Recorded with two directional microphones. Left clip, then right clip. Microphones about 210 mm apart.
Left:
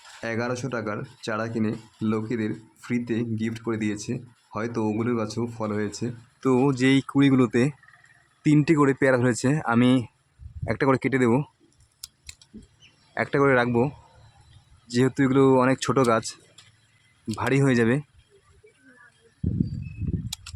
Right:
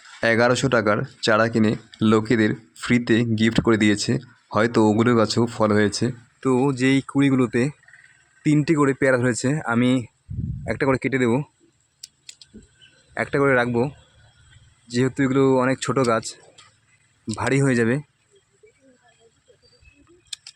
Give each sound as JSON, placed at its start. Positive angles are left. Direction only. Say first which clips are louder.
{"t": 0.2, "sound": "speech", "louder": "right 11 dB", "side_deg": -30}
{"t": 6.4, "sound": "speech", "louder": "right 1 dB", "side_deg": -5}
{"t": 13.1, "sound": "speech", "louder": "right 2 dB", "side_deg": -5}